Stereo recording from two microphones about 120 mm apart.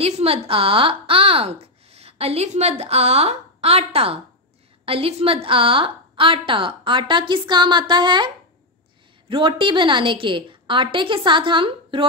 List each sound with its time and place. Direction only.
0.0 s a woman's voice: 55° right (ahead or behind); by 8.3 s 40° right (ahead or behind)
9.3 s a woman's voice: 45° right (ahead or behind)